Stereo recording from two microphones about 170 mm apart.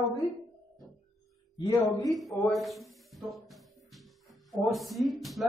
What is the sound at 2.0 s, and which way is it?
Speech, centre (ahead or behind).